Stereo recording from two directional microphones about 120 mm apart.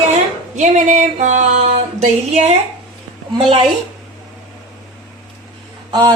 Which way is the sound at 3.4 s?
50° right (ahead or behind).